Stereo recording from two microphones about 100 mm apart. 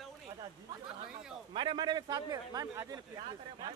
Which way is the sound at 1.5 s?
50° right (ahead or behind).